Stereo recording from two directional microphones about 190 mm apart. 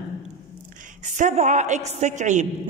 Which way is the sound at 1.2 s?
40° right (ahead or behind).